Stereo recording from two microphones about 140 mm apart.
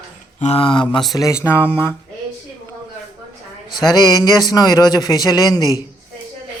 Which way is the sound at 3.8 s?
25° left (ahead or behind).